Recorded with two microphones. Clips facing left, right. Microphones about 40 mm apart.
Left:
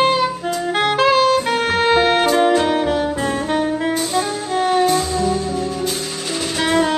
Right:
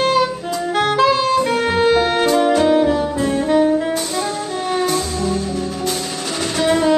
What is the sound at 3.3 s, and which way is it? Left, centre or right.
Saxophone, left.